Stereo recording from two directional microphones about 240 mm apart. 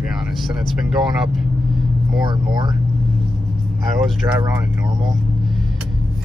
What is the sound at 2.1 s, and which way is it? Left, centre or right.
Speech, centre.